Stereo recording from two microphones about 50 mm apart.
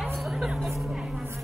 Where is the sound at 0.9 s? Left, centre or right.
Centre.